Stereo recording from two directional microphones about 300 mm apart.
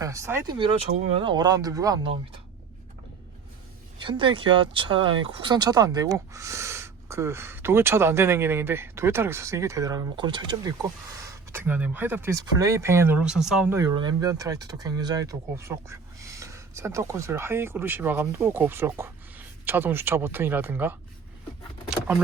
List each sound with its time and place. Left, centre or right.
0.0 s speech: centre
3.9 s speech: centre